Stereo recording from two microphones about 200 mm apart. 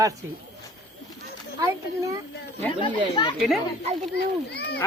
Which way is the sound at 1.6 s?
15° right (ahead or behind).